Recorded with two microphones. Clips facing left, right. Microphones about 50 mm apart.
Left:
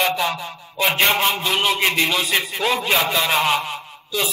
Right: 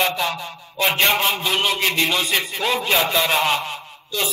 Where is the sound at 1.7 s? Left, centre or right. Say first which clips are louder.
Left 2 dB; centre.